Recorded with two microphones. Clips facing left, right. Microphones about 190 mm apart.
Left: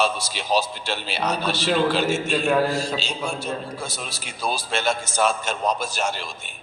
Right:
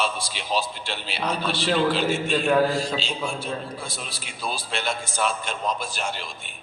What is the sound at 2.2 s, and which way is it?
Speech, 5° left (ahead or behind).